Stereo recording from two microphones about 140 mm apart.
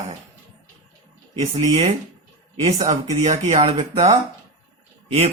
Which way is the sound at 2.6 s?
55° right (ahead or behind).